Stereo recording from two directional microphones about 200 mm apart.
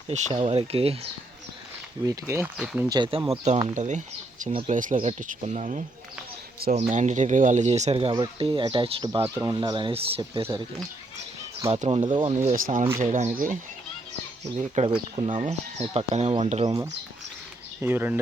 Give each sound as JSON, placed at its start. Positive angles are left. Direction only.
{"t": 0.1, "sound": "speech", "side_deg": -30}
{"t": 2.0, "sound": "speech", "side_deg": -15}
{"t": 3.2, "sound": "speech", "side_deg": -35}
{"t": 9.3, "sound": "speech", "side_deg": -15}
{"t": 11.7, "sound": "speech", "side_deg": -30}
{"t": 12.5, "sound": "speech", "side_deg": -45}
{"t": 14.8, "sound": "speech", "side_deg": -35}
{"t": 16.6, "sound": "speech", "side_deg": -20}